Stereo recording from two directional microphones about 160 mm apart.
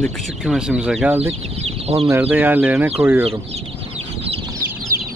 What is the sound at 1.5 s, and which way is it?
Speech, 40° right (ahead or behind).